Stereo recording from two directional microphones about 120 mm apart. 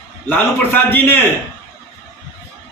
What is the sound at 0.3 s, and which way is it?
Speech, 15° left (ahead or behind).